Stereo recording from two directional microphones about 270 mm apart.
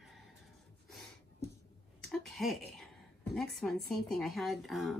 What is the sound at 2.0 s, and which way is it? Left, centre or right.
A woman's voice, centre.